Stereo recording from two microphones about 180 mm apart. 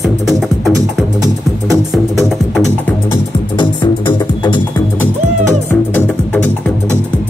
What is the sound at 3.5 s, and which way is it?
Music, 25° left (ahead or behind).